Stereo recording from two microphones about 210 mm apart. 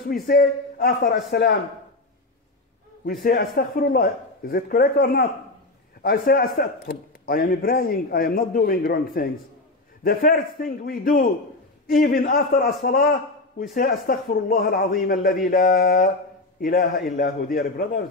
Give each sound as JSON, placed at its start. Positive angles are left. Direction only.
{"t": 0.1, "sound": "a man's voice", "side_deg": 45}
{"t": 3.3, "sound": "a man's voice", "side_deg": 45}